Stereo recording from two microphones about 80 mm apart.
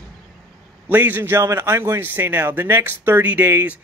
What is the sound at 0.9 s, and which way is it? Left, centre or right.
A man's voice, right.